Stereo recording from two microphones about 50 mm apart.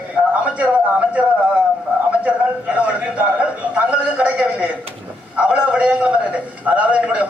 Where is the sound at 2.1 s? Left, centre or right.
Right.